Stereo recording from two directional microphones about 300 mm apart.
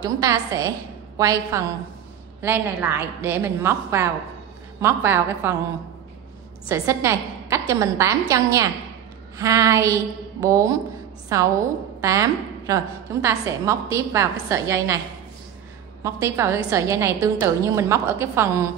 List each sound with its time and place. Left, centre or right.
0.0 s a woman's voice: centre
6.7 s a woman's voice: centre
16.0 s a woman's voice: centre